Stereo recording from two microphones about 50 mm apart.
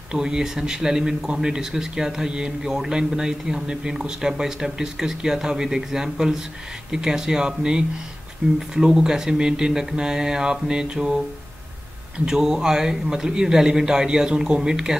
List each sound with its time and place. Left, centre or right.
0.1 s speech: centre
12.3 s speech: centre